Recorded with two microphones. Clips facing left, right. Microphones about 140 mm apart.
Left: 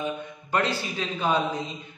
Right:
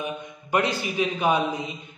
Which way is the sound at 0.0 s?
15° right (ahead or behind).